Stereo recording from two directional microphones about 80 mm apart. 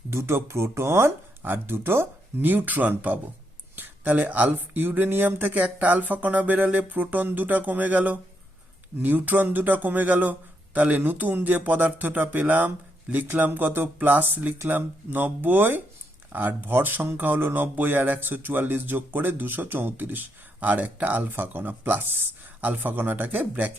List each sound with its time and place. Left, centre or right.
0.1 s speech: right